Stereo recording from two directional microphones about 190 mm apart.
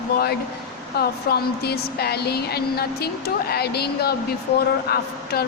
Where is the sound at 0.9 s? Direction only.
55° left (ahead or behind).